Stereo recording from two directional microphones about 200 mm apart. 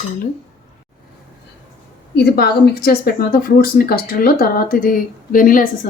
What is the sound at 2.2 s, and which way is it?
A woman's voice, 50° left (ahead or behind).